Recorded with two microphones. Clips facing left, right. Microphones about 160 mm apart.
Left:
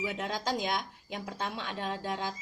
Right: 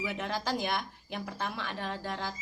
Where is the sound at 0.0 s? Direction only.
15° left (ahead or behind).